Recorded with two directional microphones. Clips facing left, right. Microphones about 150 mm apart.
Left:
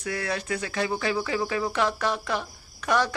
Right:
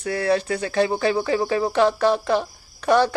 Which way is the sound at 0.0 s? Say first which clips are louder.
Right 9 dB; 30° right (ahead or behind).